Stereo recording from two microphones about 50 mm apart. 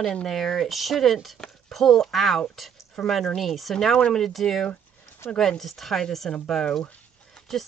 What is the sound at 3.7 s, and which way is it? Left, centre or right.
Speech, centre.